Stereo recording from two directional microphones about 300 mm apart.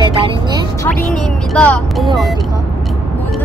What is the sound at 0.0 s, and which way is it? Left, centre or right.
Music, centre.